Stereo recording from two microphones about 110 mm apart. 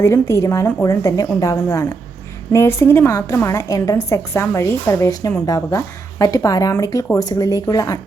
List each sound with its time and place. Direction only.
0.0 s a woman's voice: 25° left (ahead or behind)